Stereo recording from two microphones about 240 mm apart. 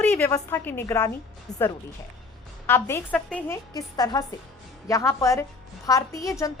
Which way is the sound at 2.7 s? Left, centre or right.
Centre.